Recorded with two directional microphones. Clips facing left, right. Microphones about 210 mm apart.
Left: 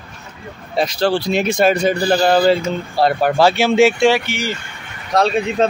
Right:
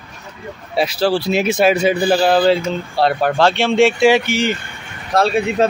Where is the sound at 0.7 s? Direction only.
5° right (ahead or behind).